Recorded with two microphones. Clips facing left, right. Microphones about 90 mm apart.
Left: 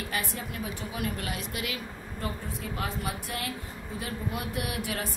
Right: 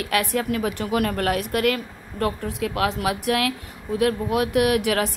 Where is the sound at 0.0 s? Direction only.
70° right (ahead or behind).